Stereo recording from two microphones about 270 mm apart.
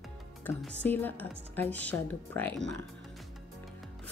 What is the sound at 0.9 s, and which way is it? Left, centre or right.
Music, centre.